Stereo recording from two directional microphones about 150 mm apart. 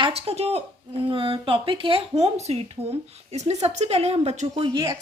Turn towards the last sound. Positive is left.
turn(degrees=-30)  # may be behind; listen again after turning